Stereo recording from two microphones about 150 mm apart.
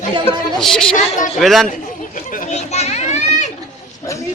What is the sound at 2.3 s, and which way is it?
Children playing, 60° left (ahead or behind).